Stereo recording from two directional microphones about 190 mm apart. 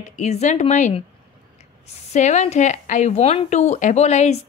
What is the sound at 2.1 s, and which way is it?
Speech, 40° left (ahead or behind).